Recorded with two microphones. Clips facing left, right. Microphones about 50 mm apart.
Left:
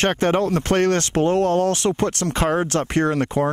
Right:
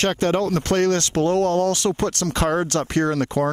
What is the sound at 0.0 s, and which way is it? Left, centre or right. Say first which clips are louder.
Speech: left 1 dB; left.